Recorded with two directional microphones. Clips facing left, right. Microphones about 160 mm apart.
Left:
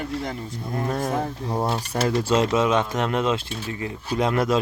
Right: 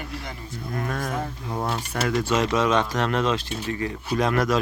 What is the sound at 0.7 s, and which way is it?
Speech, 25° left (ahead or behind).